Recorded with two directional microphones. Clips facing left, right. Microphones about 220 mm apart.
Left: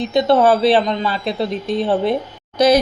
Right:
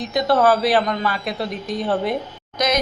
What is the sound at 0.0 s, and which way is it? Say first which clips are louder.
Speech: left 4 dB; 25° left (ahead or behind).